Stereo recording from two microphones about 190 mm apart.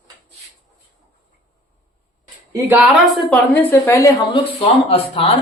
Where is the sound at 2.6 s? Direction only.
10° right (ahead or behind); by 4.4 s 15° left (ahead or behind).